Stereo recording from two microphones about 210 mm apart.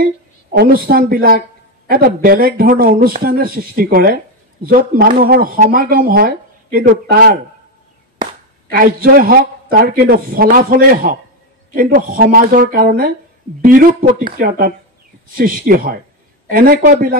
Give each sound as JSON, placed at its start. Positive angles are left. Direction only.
{"t": 0.5, "sound": "speech", "side_deg": -45}
{"t": 8.7, "sound": "speech", "side_deg": -45}